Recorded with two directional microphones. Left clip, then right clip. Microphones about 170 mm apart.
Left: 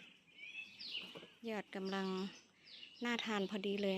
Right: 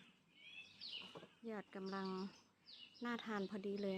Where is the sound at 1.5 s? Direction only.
35° left (ahead or behind).